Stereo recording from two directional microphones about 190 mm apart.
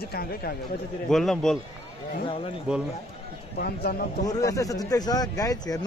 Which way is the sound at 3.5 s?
55° left (ahead or behind).